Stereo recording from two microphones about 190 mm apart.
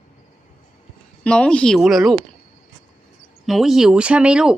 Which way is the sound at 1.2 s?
5° left (ahead or behind).